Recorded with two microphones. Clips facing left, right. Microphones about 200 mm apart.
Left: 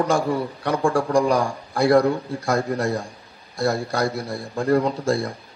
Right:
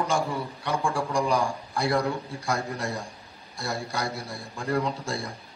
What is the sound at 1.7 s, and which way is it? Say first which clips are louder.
A man's voice: left 11 dB; 55° left (ahead or behind).